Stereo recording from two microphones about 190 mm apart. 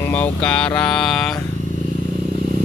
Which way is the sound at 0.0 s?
10° left (ahead or behind).